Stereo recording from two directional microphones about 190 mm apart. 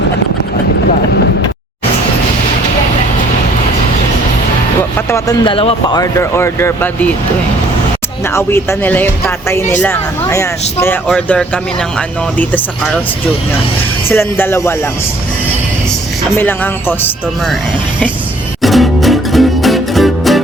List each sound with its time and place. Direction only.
4.9 s speech: 15° left (ahead or behind)
8.2 s speech: 15° left (ahead or behind)
14.1 s speech: 10° left (ahead or behind)
16.3 s speech: 10° left (ahead or behind)
18.6 s music: centre (ahead or behind)